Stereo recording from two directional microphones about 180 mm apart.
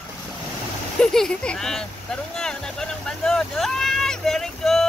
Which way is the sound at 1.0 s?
5° left (ahead or behind).